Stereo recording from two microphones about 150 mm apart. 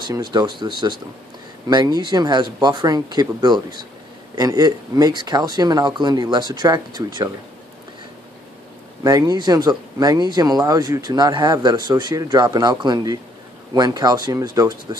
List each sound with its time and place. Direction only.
0.0 s speech: 30° right (ahead or behind)
9.0 s speech: 25° right (ahead or behind)